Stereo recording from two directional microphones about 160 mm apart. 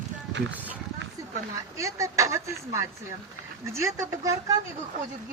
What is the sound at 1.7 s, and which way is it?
Speech, 20° right (ahead or behind).